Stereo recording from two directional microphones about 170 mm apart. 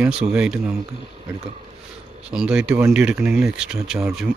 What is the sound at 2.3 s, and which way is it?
Speech, 5° right (ahead or behind).